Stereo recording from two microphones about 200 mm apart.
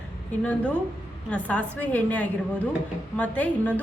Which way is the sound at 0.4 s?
5° left (ahead or behind).